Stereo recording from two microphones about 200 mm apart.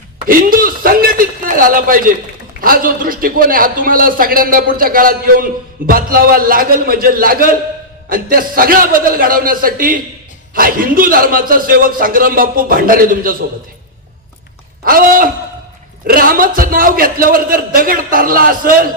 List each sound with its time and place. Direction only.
0.3 s a sound: 45° right (ahead or behind)
2.6 s a man's voice: 45° right (ahead or behind)
14.8 s a man's voice: 45° right (ahead or behind)